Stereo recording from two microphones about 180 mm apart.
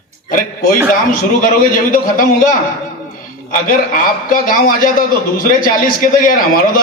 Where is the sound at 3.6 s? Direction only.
50° left (ahead or behind).